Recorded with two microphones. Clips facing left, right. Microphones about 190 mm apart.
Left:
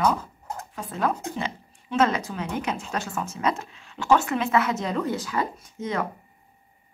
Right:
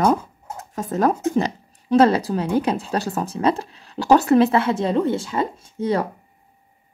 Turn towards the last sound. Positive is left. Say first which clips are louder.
# right 7 dB
turn(degrees=-35)  # may be behind; listen again after turning